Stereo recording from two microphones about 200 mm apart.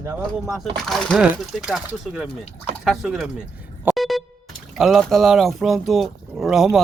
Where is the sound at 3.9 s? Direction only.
Centre (ahead or behind).